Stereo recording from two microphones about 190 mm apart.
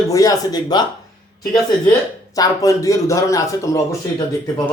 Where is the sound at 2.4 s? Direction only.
15° left (ahead or behind).